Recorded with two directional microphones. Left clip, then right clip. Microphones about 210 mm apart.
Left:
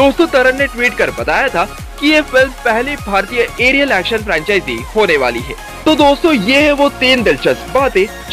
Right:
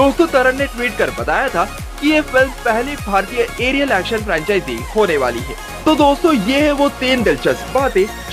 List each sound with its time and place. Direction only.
0.0 s speech: 5° left (ahead or behind)